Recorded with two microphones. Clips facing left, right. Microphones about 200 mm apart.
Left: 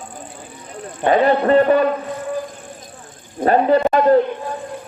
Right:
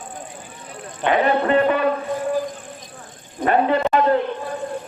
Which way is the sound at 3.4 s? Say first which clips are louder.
Left 4 dB; 35° left (ahead or behind).